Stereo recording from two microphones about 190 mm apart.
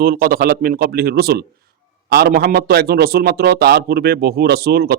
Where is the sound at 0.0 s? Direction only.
50° right (ahead or behind).